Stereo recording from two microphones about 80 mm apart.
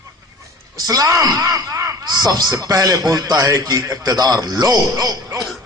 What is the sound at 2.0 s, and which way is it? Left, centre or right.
A man's voice, right.